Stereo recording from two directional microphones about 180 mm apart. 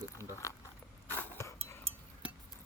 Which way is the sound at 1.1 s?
15° left (ahead or behind).